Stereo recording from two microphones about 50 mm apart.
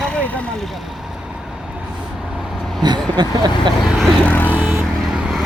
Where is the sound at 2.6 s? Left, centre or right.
Centre.